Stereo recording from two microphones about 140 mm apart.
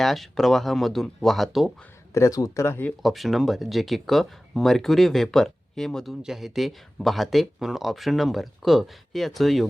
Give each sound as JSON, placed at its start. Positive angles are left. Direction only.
{"t": 0.0, "sound": "speech", "side_deg": 0}
{"t": 2.1, "sound": "speech", "side_deg": 25}
{"t": 3.0, "sound": "speech", "side_deg": 0}